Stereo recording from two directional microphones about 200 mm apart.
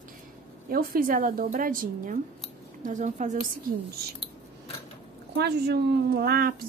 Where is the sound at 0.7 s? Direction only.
45° right (ahead or behind).